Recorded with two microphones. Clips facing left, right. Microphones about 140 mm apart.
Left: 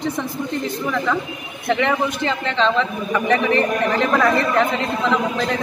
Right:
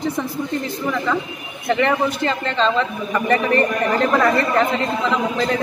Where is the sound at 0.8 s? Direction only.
Centre (ahead or behind).